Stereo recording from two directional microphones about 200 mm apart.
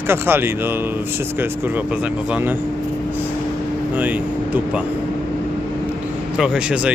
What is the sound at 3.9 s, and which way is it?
Speech, 10° right (ahead or behind).